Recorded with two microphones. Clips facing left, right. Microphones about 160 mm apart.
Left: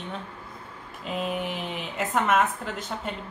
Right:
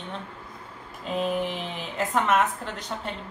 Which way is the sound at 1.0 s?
5° left (ahead or behind).